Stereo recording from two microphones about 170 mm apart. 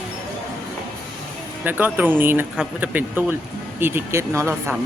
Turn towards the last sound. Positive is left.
turn(degrees=-15)  # may be behind; listen again after turning